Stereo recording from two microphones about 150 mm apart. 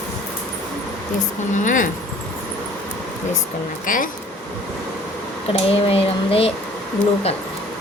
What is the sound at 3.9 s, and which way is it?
Speech, 65° left (ahead or behind).